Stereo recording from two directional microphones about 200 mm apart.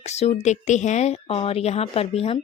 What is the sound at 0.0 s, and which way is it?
A woman's voice, 35° left (ahead or behind).